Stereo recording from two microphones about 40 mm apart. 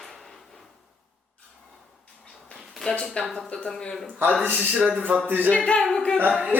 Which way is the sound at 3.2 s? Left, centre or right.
Left.